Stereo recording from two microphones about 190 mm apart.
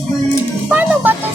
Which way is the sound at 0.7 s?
10° right (ahead or behind).